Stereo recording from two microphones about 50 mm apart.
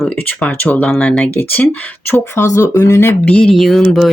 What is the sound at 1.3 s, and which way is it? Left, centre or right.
Speech, left.